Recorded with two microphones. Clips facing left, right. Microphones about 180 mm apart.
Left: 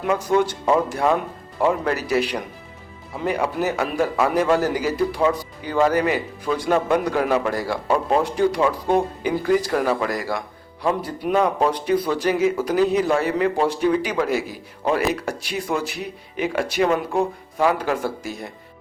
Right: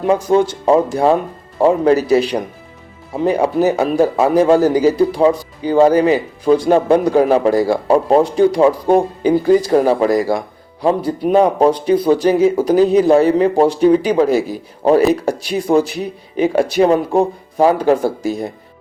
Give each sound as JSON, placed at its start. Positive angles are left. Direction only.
{"t": 0.0, "sound": "a man's voice", "side_deg": -30}